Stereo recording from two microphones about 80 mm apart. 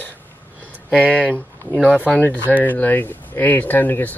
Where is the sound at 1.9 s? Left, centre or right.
Centre.